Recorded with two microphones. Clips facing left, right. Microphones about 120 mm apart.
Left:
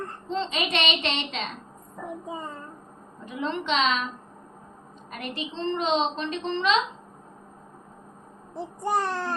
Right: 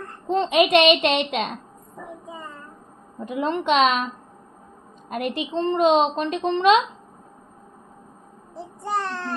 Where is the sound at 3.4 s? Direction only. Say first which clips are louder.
Right 6 dB; 50° right (ahead or behind).